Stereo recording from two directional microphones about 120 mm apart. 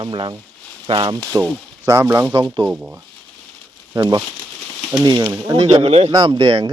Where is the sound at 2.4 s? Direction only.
40° right (ahead or behind).